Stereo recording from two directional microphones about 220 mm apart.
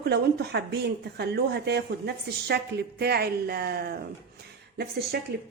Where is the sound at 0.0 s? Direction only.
45° right (ahead or behind).